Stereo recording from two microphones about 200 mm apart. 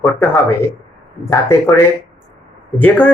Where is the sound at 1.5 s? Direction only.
10° left (ahead or behind).